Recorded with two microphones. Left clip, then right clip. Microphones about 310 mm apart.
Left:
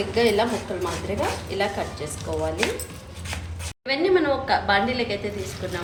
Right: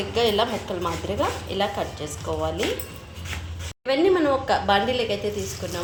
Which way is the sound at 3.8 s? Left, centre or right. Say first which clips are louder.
Right 1 dB; right.